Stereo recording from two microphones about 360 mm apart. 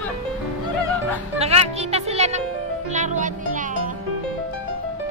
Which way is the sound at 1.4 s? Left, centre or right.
Centre.